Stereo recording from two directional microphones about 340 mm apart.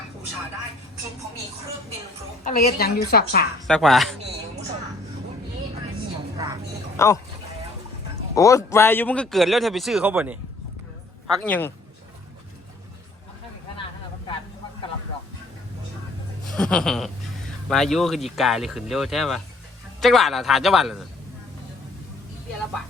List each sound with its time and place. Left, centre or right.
2.4 s a woman's voice: left
3.7 s a man's voice: centre
6.3 s a sound: centre
6.9 s speech: centre
8.4 s a man's voice: centre
11.4 s a man's voice: centre
16.5 s a sound: centre
17.7 s a man's voice: centre